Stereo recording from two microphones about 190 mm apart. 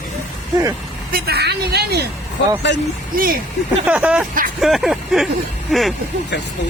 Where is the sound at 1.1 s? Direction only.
55° right (ahead or behind).